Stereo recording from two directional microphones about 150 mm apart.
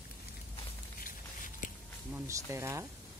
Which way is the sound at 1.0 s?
60° left (ahead or behind).